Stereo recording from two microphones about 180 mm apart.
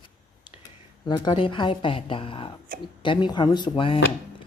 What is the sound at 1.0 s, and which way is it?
Speech, 25° left (ahead or behind).